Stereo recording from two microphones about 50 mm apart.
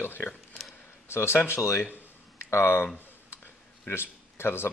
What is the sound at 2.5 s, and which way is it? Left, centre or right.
Speech, left.